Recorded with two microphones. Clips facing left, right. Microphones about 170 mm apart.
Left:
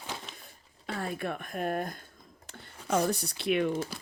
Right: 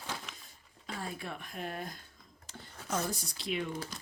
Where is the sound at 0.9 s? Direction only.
60° left (ahead or behind).